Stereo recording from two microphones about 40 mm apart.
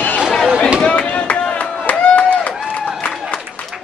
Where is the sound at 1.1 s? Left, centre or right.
Left.